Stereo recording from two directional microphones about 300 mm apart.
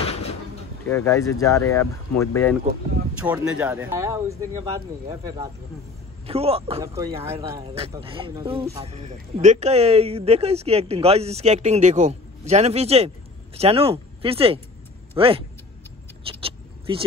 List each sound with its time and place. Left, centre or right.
0.0 s a sound: centre
0.8 s speech: centre
3.2 s speech: centre
16.3 s vehicle: centre